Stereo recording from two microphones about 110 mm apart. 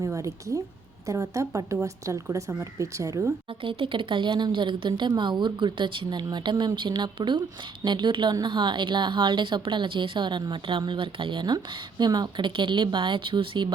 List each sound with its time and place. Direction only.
0.0 s a woman's voice: 30° right (ahead or behind)
3.6 s a woman's voice: 55° right (ahead or behind)